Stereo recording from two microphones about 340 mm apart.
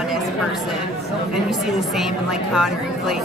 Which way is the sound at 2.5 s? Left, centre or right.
Centre.